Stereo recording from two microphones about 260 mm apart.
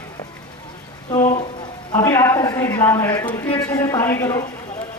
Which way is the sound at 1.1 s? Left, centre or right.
Centre.